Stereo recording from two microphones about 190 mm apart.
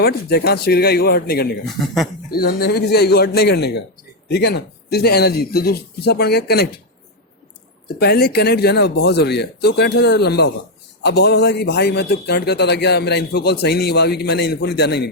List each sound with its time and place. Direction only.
0.0 s a man's voice: 55° left (ahead or behind)
1.8 s speech: 5° left (ahead or behind)
2.3 s a man's voice: 55° left (ahead or behind)
7.9 s a man's voice: 55° left (ahead or behind)